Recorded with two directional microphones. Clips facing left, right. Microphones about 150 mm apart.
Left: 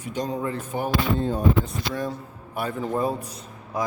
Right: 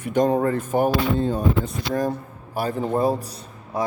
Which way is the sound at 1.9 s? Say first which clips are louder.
Right 9 dB; 40° right (ahead or behind).